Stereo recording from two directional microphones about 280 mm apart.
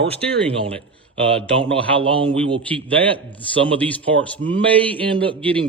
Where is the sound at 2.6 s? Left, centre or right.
Centre.